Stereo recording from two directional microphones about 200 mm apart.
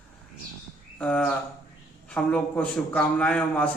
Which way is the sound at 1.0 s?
5° left (ahead or behind).